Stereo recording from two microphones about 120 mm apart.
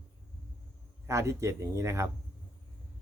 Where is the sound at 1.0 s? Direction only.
25° right (ahead or behind).